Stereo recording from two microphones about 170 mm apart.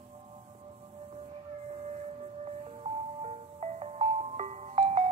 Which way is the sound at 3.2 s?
40° right (ahead or behind).